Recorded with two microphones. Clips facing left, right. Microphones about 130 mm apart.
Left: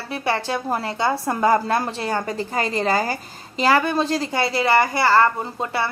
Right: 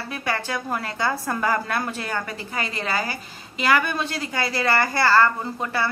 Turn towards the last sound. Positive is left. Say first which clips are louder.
# left 2 dB
turn(degrees=20)  # may be behind; listen again after turning